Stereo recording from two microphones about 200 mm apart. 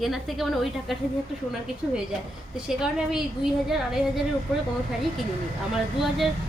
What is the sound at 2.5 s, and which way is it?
A woman's voice, 5° right (ahead or behind).